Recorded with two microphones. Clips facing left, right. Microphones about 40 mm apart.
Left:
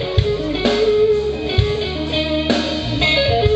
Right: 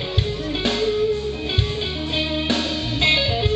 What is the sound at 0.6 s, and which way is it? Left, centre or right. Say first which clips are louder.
Music: left 6 dB; centre.